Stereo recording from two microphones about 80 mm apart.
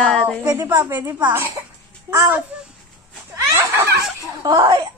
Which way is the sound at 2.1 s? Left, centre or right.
Right.